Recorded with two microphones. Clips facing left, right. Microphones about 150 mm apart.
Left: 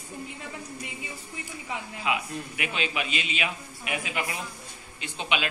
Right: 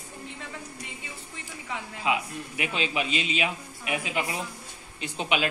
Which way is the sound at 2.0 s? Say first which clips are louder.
Right 2 dB; 30° right (ahead or behind).